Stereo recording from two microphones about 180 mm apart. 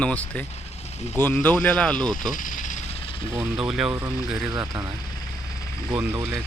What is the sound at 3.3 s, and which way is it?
Speech, 5° right (ahead or behind).